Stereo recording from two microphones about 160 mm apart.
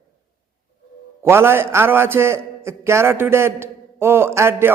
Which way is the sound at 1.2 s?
15° right (ahead or behind).